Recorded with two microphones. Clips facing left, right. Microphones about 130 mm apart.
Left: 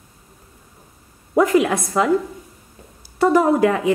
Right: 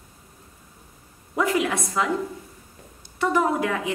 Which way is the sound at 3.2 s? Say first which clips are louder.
Left 7 dB; 40° left (ahead or behind).